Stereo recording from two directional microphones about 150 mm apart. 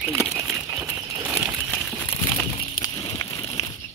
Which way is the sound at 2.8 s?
25° left (ahead or behind).